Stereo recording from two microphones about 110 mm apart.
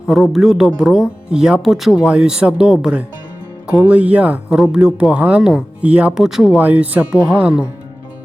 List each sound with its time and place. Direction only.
0.1 s a man's voice: centre (ahead or behind)
6.6 s a man's voice: 15° right (ahead or behind)